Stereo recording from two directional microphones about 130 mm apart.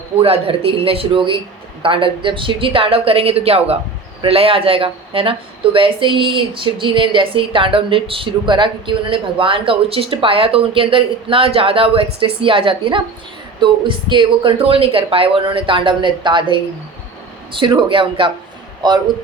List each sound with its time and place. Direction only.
0.2 s a woman's voice: 45° right (ahead or behind)
17.7 s a woman's voice: 40° right (ahead or behind)